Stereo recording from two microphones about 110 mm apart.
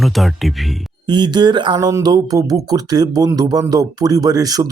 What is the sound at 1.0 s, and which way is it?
A man's voice, 40° right (ahead or behind).